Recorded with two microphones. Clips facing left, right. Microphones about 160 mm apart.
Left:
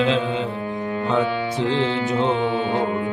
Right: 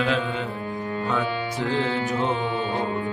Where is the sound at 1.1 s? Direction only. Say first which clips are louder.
Left 6 dB; 20° left (ahead or behind).